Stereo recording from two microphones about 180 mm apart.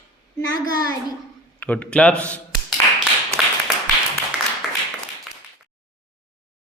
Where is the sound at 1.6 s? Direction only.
10° left (ahead or behind).